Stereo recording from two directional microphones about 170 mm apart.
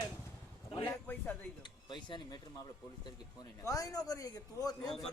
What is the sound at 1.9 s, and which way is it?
Speech, 25° left (ahead or behind).